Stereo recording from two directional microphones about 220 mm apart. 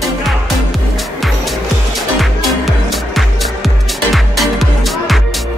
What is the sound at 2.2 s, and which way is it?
Music, centre (ahead or behind).